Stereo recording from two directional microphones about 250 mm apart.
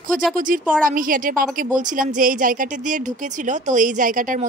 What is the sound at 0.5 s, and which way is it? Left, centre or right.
Speech, right.